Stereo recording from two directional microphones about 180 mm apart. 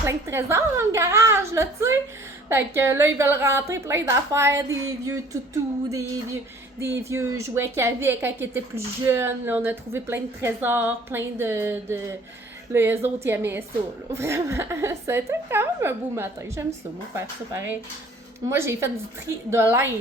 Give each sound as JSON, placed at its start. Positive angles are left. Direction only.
{"t": 0.0, "sound": "a woman's voice", "side_deg": -15}
{"t": 6.7, "sound": "a woman's voice", "side_deg": -15}